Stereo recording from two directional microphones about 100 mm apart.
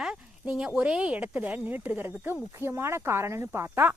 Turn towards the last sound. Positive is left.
turn(degrees=-25)  # may be behind; listen again after turning